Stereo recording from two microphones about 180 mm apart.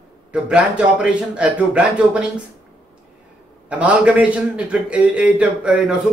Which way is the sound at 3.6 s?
5° right (ahead or behind).